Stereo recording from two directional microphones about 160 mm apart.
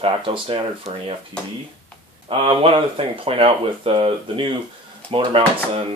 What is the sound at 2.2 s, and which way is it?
Speech, 35° right (ahead or behind).